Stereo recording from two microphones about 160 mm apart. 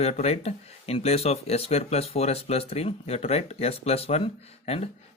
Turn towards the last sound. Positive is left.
turn(degrees=40)  # may be behind; listen again after turning